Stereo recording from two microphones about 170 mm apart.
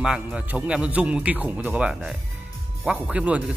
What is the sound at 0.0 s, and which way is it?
A man's voice, 5° right (ahead or behind).